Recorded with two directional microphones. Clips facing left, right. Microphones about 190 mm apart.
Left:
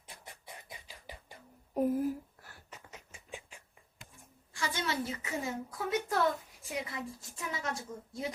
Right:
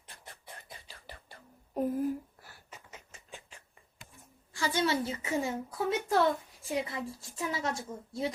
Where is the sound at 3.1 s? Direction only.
10° left (ahead or behind).